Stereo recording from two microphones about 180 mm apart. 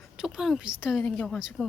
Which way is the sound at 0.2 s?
Centre (ahead or behind).